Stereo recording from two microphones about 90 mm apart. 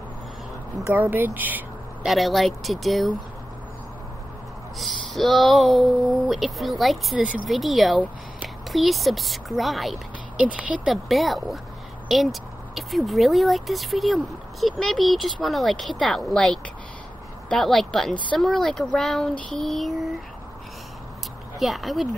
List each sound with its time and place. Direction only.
0.9 s speech: 20° right (ahead or behind)
2.0 s speech: centre (ahead or behind)
4.7 s speech: centre (ahead or behind)
10.4 s speech: 15° right (ahead or behind)
10.9 s speech: centre (ahead or behind)
21.5 s speech: centre (ahead or behind)